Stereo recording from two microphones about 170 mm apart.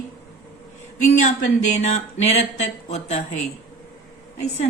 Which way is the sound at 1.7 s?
40° left (ahead or behind).